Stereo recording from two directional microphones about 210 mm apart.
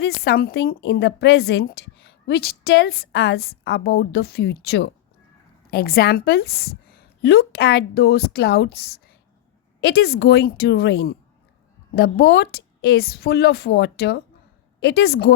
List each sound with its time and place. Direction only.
0.0 s a woman's voice: 50° left (ahead or behind)